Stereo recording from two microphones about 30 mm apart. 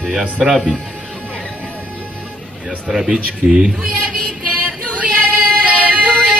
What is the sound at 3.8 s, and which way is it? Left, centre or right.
Speech, right.